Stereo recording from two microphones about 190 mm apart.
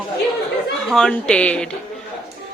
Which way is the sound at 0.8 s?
5° left (ahead or behind).